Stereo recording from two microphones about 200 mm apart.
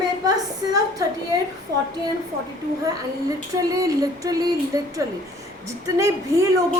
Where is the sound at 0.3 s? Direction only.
15° right (ahead or behind).